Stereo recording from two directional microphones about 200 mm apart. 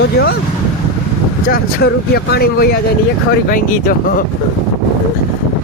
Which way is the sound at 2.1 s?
50° left (ahead or behind).